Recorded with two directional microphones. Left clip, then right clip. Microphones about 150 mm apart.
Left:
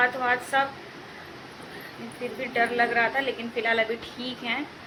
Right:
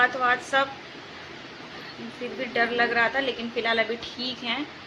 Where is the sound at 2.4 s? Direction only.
30° right (ahead or behind).